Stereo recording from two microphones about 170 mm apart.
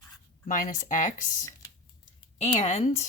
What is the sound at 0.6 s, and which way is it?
Speech, 55° left (ahead or behind).